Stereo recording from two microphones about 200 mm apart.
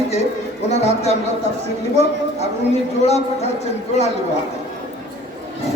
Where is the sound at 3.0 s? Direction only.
30° left (ahead or behind).